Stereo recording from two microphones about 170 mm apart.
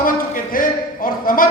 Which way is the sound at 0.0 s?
55° left (ahead or behind).